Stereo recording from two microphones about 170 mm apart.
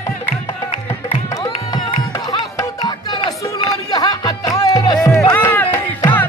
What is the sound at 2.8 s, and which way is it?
Music, 25° left (ahead or behind).